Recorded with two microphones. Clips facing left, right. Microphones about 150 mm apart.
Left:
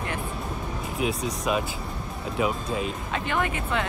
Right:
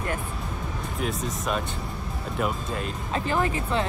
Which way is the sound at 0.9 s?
Centre (ahead or behind).